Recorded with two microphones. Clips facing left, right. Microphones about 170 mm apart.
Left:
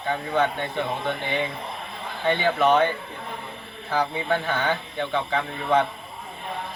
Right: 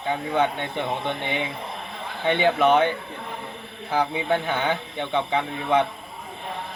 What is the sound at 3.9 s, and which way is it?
A man's voice, 15° right (ahead or behind).